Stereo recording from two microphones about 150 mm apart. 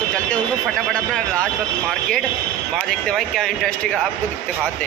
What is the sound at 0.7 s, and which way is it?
Speech, centre (ahead or behind).